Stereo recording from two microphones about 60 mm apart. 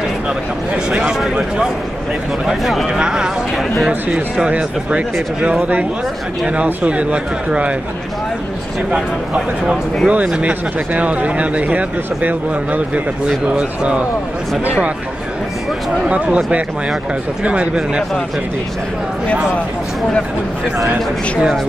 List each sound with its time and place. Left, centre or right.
1.2 s a man's voice: centre
3.0 s a man's voice: centre
8.9 s a man's voice: centre
16.1 s speech: centre